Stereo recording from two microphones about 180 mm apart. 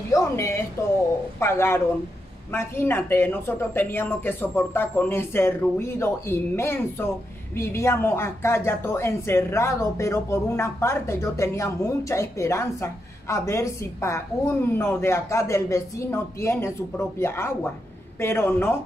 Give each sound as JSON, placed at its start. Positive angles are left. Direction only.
{"t": 0.1, "sound": "a woman's voice", "side_deg": 15}